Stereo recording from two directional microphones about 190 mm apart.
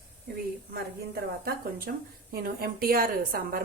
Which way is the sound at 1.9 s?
55° right (ahead or behind).